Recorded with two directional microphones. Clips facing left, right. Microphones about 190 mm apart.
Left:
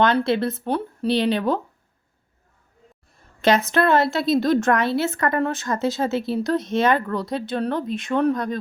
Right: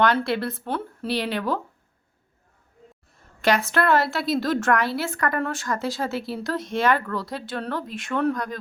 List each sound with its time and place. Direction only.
0.0 s a woman's voice: 20° left (ahead or behind)
3.4 s a woman's voice: 20° left (ahead or behind)